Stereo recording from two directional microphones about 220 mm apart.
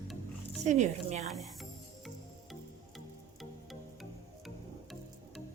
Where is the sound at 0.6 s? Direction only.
30° right (ahead or behind).